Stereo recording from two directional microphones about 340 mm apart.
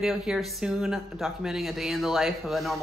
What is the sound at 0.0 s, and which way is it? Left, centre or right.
Speech, centre.